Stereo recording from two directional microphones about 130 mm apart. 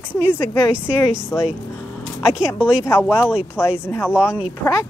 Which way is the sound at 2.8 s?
15° left (ahead or behind).